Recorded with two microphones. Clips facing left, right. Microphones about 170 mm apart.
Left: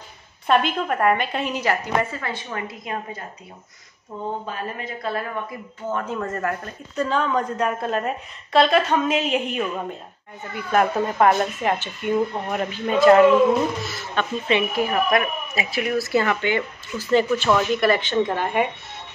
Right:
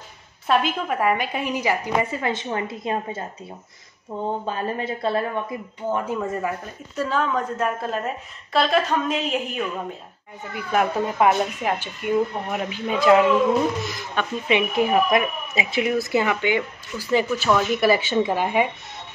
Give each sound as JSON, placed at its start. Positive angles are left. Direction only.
{"t": 0.5, "sound": "speech", "side_deg": -5}
{"t": 5.9, "sound": "speech", "side_deg": -10}
{"t": 10.7, "sound": "speech", "side_deg": -5}